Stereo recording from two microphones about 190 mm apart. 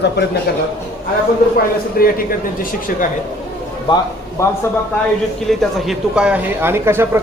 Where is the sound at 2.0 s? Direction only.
50° left (ahead or behind).